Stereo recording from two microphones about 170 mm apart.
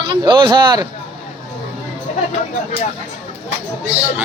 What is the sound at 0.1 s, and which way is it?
Speech, 30° right (ahead or behind).